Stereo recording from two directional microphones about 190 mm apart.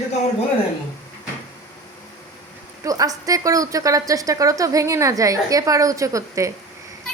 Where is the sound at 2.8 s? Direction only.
20° right (ahead or behind).